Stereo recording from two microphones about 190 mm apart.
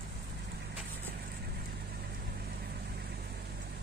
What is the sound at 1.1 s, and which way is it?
Vehicle, 55° right (ahead or behind).